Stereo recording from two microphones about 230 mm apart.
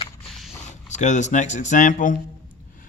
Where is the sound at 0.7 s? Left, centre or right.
Left.